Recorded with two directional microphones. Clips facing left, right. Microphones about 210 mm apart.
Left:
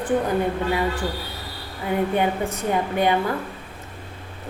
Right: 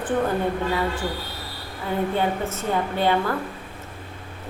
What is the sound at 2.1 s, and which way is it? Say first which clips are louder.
A woman's voice: left 2 dB; 15° left (ahead or behind).